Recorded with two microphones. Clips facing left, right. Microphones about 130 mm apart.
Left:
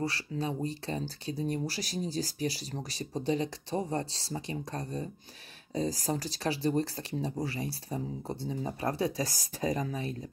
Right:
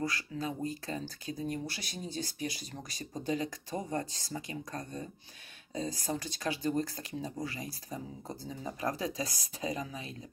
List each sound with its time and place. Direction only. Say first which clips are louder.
0.0 s speech: left 2 dB; 30° left (ahead or behind)